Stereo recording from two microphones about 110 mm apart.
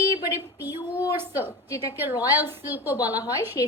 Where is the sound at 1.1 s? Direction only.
20° right (ahead or behind).